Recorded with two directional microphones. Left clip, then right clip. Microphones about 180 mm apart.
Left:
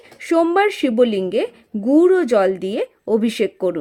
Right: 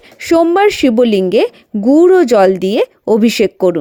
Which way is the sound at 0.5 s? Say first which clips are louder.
Right 6 dB; 35° right (ahead or behind).